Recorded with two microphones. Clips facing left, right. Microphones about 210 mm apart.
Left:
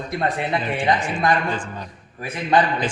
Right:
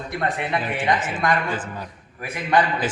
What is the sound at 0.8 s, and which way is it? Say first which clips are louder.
Speech: left 2 dB; 25° left (ahead or behind).